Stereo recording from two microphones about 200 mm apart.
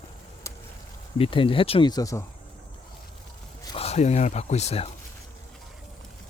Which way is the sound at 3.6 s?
30° left (ahead or behind).